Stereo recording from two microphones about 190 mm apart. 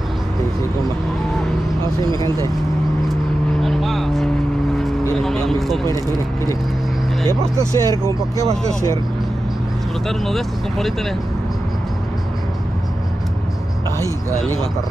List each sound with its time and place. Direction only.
2.0 s speech: 25° right (ahead or behind)
3.6 s vehicle: centre (ahead or behind)
7.2 s speech: 15° right (ahead or behind)
10.0 s speech: centre (ahead or behind)